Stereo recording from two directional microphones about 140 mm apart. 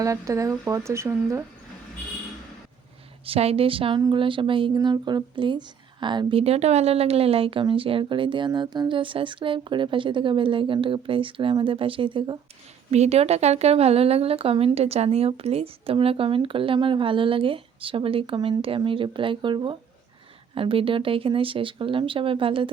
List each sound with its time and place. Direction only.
0.0 s speech: 25° right (ahead or behind)
3.2 s speech: 45° right (ahead or behind)
12.9 s speech: 50° right (ahead or behind)